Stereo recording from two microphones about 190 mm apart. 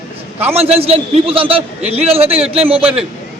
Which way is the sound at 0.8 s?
30° right (ahead or behind).